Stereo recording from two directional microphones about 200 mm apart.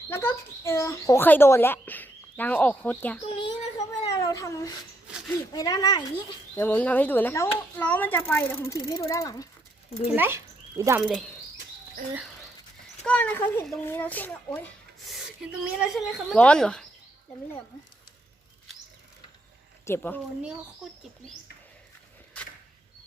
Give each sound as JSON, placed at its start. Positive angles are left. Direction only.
{"t": 0.1, "sound": "speech", "side_deg": 10}
{"t": 3.4, "sound": "a sound", "side_deg": 20}
{"t": 5.3, "sound": "speech", "side_deg": 20}
{"t": 10.1, "sound": "speech", "side_deg": -10}
{"t": 13.1, "sound": "speech", "side_deg": 5}
{"t": 15.1, "sound": "speech", "side_deg": -5}
{"t": 19.8, "sound": "speech", "side_deg": 10}